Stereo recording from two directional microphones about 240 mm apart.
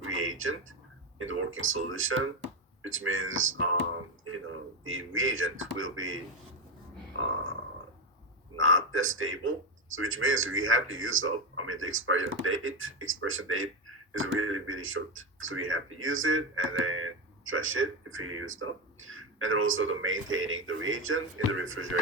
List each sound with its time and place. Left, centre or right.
0.0 s a sound: right
1.2 s speech: right
4.9 s speech: right
8.5 s speech: right